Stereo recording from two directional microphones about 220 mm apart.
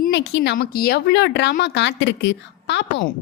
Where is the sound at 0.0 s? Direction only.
50° left (ahead or behind).